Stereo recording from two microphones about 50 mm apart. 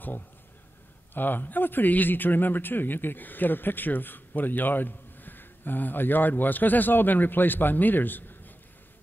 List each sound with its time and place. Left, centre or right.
1.1 s a man's voice: left